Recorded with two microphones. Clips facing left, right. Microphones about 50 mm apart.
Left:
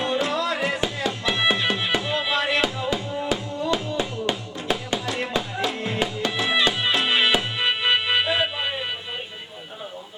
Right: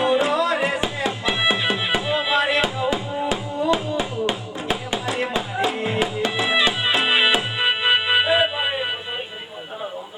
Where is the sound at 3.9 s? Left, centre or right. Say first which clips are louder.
Right 2 dB; centre.